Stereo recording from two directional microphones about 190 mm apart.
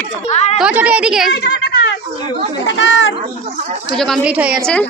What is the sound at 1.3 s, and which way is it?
Speech, 60° left (ahead or behind).